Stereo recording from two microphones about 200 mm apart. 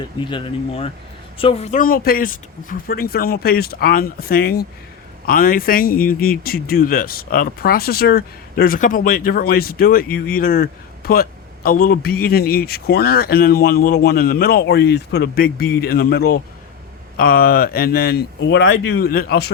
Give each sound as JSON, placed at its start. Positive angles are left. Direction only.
{"t": 0.2, "sound": "a man's voice", "side_deg": 25}